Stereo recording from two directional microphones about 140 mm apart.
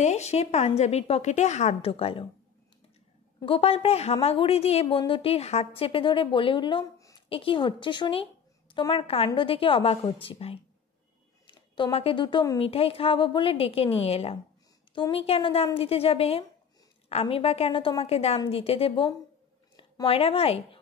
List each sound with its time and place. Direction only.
0.0 s a woman's voice: 50° left (ahead or behind)
3.4 s a woman's voice: 40° left (ahead or behind)
7.0 s a sound: 25° left (ahead or behind)
7.2 s a woman's voice: 40° left (ahead or behind)